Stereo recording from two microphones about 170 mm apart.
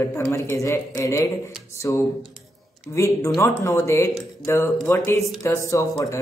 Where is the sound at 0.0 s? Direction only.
15° left (ahead or behind).